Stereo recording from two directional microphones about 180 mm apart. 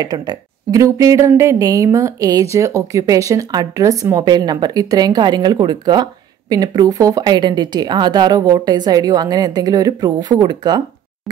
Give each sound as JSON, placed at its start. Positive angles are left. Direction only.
{"t": 0.0, "sound": "speech", "side_deg": -20}